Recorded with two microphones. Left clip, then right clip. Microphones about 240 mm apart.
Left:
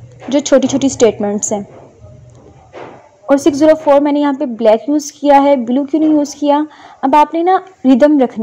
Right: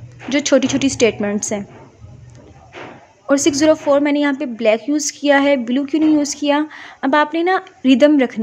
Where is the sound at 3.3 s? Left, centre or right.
Centre.